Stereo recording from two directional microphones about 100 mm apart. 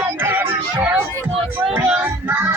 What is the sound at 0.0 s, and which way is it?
Music, 20° right (ahead or behind).